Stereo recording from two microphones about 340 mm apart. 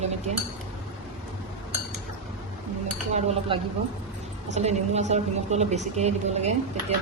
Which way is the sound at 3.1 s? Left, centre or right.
Centre.